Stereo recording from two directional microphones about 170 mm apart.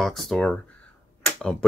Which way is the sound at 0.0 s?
Centre (ahead or behind).